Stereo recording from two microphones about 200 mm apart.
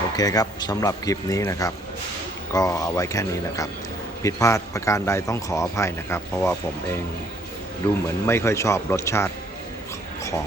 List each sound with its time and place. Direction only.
0.2 s speech: 20° left (ahead or behind)
8.0 s speech: 15° left (ahead or behind)